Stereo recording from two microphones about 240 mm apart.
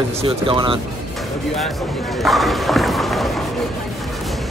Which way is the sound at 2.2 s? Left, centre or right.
Centre.